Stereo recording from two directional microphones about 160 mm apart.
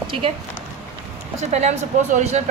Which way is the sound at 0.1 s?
35° right (ahead or behind).